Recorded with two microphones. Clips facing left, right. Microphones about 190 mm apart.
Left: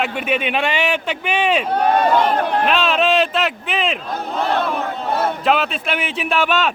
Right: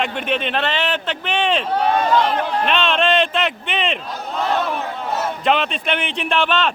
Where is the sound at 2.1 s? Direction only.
55° left (ahead or behind).